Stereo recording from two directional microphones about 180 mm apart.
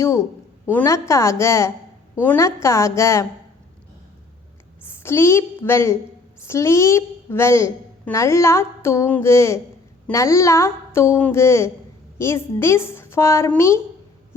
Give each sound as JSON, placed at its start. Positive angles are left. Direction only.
{"t": 0.6, "sound": "a woman's voice", "side_deg": 10}
{"t": 4.8, "sound": "a woman's voice", "side_deg": 15}